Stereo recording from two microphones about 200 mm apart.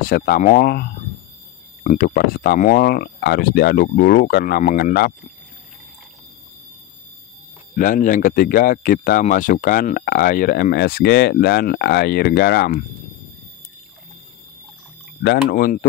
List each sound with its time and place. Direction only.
0.0 s speech: 45° left (ahead or behind)
7.7 s speech: 40° left (ahead or behind)
15.2 s speech: 45° left (ahead or behind)